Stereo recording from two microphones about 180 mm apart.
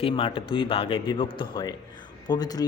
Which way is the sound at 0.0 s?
30° left (ahead or behind).